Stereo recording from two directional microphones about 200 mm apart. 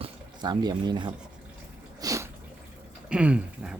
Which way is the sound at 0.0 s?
20° right (ahead or behind).